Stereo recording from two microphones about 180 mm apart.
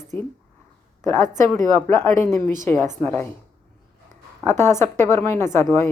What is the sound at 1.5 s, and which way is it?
Speech, 15° left (ahead or behind).